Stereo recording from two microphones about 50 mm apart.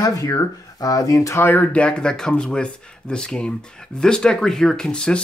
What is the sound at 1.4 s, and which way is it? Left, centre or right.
Speech, left.